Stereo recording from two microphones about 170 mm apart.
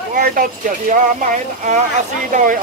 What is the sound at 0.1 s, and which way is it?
Speech, 55° right (ahead or behind).